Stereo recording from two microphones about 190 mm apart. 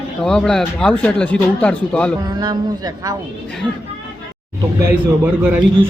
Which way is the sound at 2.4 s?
20° right (ahead or behind).